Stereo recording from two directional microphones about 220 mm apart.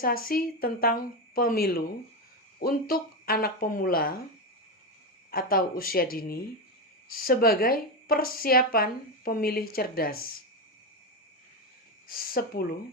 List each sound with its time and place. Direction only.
0.0 s speech: 40° left (ahead or behind)
5.3 s speech: 40° left (ahead or behind)
12.0 s speech: 40° left (ahead or behind)